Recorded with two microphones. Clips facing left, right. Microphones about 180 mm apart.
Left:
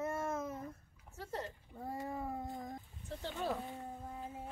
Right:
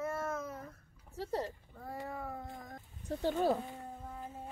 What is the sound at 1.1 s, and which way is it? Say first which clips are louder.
Speech: right 6 dB; 35° right (ahead or behind).